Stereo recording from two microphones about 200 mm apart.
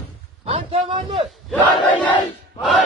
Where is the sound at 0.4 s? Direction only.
30° right (ahead or behind).